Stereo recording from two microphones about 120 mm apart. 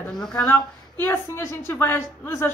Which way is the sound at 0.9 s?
15° left (ahead or behind).